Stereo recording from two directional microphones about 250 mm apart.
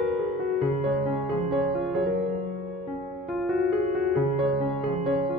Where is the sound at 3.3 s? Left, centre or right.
Centre.